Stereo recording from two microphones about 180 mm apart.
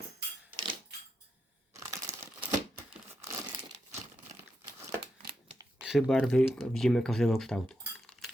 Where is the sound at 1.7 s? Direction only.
15° right (ahead or behind).